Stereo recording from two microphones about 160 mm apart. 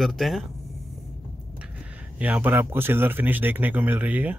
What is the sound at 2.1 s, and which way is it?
Speech, 10° right (ahead or behind).